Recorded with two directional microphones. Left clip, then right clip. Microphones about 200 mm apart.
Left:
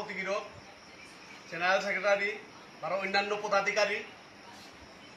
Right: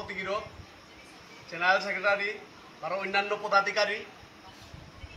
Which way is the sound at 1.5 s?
Centre (ahead or behind).